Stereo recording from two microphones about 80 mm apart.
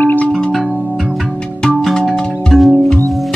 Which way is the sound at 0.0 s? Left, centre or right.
Left.